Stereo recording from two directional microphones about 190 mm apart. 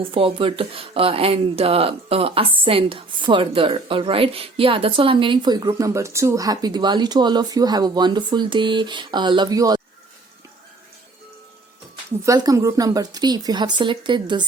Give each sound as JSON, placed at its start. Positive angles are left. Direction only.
{"t": 0.0, "sound": "speech", "side_deg": -30}
{"t": 12.2, "sound": "speech", "side_deg": -20}